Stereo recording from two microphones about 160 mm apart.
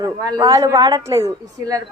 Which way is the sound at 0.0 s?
25° right (ahead or behind).